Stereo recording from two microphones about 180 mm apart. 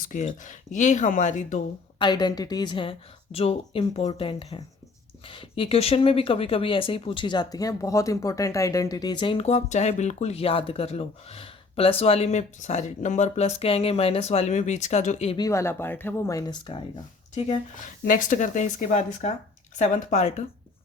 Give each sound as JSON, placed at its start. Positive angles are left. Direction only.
{"t": 0.0, "sound": "speech", "side_deg": 45}
{"t": 2.0, "sound": "speech", "side_deg": 25}
{"t": 15.4, "sound": "speech", "side_deg": 15}
{"t": 18.0, "sound": "speech", "side_deg": 50}